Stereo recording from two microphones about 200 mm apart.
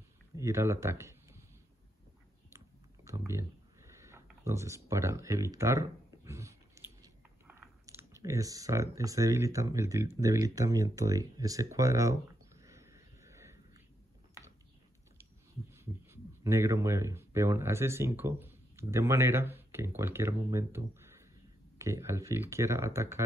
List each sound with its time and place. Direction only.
0.4 s speech: 15° right (ahead or behind)
2.5 s a sound: 15° right (ahead or behind)
7.0 s speech: 15° right (ahead or behind)
15.7 s speech: 10° right (ahead or behind)